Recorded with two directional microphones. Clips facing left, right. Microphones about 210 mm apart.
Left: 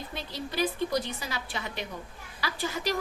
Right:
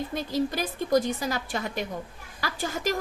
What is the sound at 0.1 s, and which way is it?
A woman's voice, 45° right (ahead or behind).